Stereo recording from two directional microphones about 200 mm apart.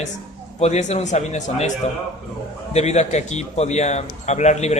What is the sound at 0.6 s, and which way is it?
A woman's voice, 35° left (ahead or behind).